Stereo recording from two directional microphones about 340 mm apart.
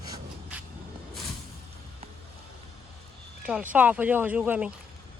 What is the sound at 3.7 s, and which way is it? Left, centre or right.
Speech, centre.